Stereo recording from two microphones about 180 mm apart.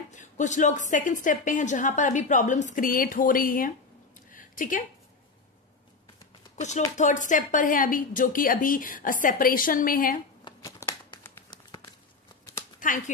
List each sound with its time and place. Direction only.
0.1 s a woman's voice: 45° left (ahead or behind)
6.5 s a woman's voice: 40° left (ahead or behind)
10.4 s shuffling cards: 20° left (ahead or behind)
12.8 s speech: 45° left (ahead or behind)